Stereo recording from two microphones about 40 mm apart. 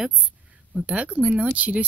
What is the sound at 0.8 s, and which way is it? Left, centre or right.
Speech, right.